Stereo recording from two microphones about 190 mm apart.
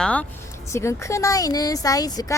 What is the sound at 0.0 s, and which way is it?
Speech, 5° left (ahead or behind).